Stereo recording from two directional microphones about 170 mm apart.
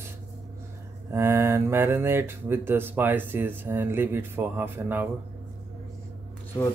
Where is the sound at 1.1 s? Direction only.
15° right (ahead or behind).